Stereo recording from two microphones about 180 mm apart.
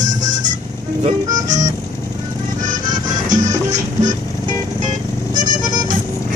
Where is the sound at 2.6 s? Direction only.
45° right (ahead or behind).